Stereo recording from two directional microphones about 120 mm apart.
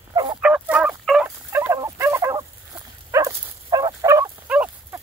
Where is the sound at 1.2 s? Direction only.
20° right (ahead or behind).